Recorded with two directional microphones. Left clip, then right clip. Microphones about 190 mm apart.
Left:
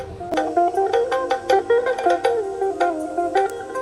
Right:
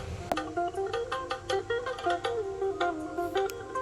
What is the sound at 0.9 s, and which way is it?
Music, 30° left (ahead or behind).